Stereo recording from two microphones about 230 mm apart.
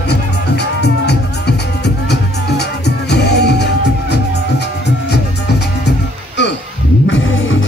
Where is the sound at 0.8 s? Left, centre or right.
Left.